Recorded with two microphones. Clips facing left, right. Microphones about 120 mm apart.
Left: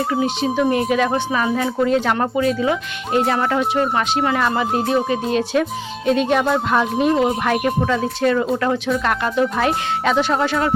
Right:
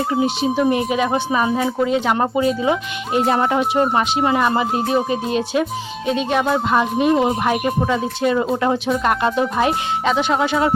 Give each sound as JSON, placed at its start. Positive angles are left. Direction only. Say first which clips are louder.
{"t": 0.4, "sound": "speech", "louder": "left 1 dB", "side_deg": -10}
{"t": 2.1, "sound": "speech", "louder": "right 1 dB", "side_deg": -20}
{"t": 6.1, "sound": "speech", "louder": "left 2 dB", "side_deg": 0}
{"t": 9.6, "sound": "speech", "louder": "even", "side_deg": 0}